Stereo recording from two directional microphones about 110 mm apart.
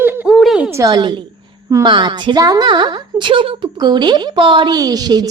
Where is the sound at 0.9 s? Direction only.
45° right (ahead or behind).